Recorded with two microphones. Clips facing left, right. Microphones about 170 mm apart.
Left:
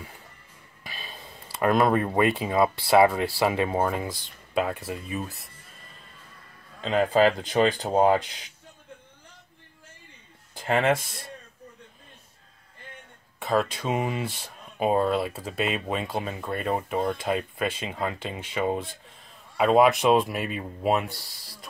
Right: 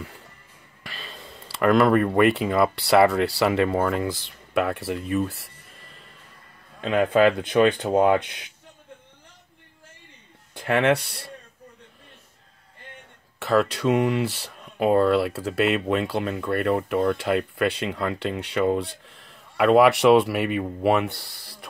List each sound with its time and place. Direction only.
0.8 s a sound: 75° right (ahead or behind)
1.5 s speech: 80° right
6.8 s speech: 60° right (ahead or behind)
10.5 s speech: 65° right (ahead or behind)
13.4 s speech: 75° right (ahead or behind)